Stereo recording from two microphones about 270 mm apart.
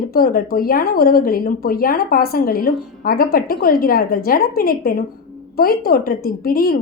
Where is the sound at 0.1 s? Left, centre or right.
Left.